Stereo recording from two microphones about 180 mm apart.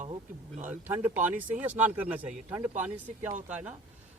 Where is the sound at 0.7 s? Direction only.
10° right (ahead or behind).